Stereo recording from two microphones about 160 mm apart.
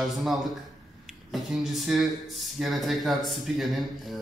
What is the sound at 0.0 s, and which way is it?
Speech, centre (ahead or behind).